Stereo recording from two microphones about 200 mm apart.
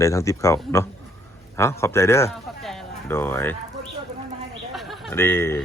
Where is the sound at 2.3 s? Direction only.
Centre (ahead or behind).